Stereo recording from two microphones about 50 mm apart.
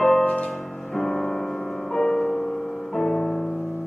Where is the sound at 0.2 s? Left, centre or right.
Left.